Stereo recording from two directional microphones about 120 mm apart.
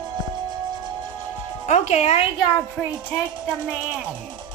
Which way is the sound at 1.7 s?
65° left (ahead or behind).